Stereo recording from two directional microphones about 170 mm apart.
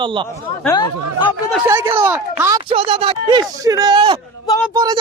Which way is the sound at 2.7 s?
35° right (ahead or behind).